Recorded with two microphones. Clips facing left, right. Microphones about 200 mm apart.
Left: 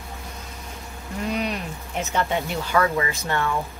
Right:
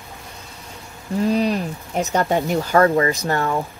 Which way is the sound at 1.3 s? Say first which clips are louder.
Right 6 dB; 35° right (ahead or behind).